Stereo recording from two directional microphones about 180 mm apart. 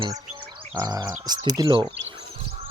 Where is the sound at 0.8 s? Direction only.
20° right (ahead or behind).